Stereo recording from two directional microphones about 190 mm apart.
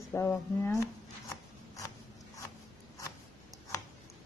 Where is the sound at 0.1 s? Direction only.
15° left (ahead or behind).